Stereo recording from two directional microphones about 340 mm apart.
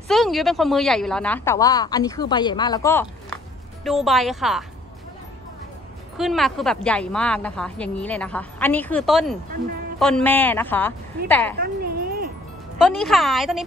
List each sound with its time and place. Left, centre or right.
0.1 s a woman's voice: centre
6.1 s a woman's voice: centre
11.6 s a sound: right
12.8 s a woman's voice: centre